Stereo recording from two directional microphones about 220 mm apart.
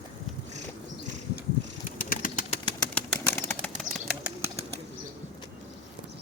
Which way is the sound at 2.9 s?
5° left (ahead or behind).